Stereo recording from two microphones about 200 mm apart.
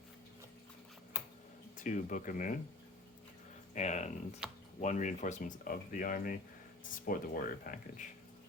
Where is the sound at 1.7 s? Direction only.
40° left (ahead or behind).